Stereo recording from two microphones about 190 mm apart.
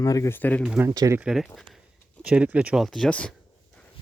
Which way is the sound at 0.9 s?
15° right (ahead or behind).